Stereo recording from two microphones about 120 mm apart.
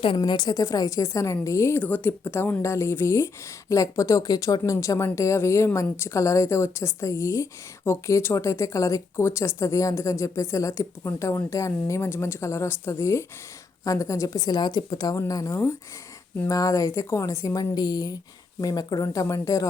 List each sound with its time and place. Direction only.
0.2 s a woman's voice: 35° left (ahead or behind)